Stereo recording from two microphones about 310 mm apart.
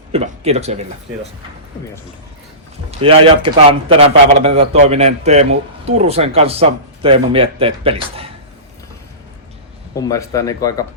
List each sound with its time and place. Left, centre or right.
0.1 s a sound: right
3.0 s a man's voice: centre
9.9 s speech: centre